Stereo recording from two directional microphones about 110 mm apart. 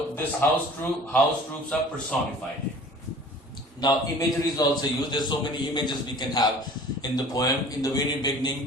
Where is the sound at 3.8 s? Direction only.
40° left (ahead or behind).